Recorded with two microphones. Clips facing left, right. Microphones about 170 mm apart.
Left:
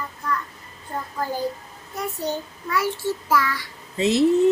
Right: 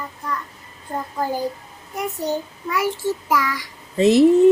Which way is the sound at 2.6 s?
15° right (ahead or behind).